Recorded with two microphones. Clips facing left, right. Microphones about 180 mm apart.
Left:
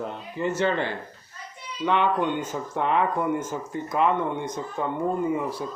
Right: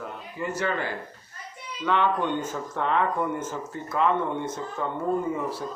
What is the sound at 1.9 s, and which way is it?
Speech, 15° left (ahead or behind).